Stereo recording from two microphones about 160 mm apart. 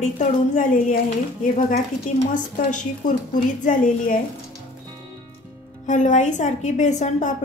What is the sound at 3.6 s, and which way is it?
Speech, 55° left (ahead or behind).